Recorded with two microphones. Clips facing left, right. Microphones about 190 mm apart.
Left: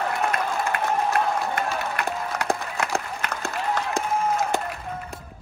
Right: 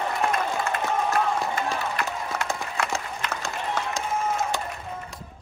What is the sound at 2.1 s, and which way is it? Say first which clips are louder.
Run: left 3 dB; 60° left (ahead or behind).